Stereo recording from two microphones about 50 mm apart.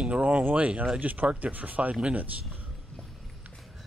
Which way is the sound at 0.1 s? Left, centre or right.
Right.